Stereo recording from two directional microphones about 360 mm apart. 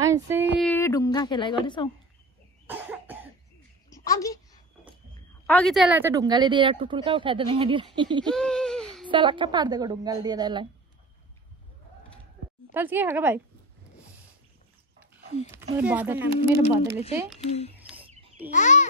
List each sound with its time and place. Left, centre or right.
0.0 s a sound: centre
0.6 s speech: centre
2.6 s cough: centre
3.9 s a sound: centre
5.5 s speech: centre
8.3 s baby cry: centre
9.1 s speech: centre
12.7 s speech: centre
15.8 s speech: centre
17.5 s a child's voice: centre